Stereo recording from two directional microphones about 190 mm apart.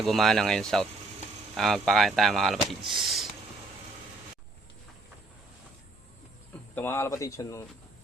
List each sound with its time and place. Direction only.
0.0 s speech: centre (ahead or behind)
6.7 s a man's voice: 15° left (ahead or behind)